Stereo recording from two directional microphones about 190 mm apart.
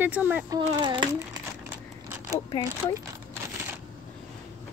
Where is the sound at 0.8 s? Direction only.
25° right (ahead or behind).